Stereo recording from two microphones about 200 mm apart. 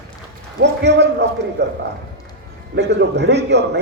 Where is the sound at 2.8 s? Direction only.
60° right (ahead or behind).